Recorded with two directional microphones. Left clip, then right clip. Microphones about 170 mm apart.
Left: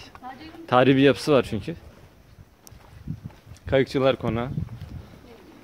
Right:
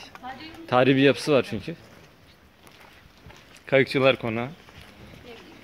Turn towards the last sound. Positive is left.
turn(degrees=25)  # may be behind; listen again after turning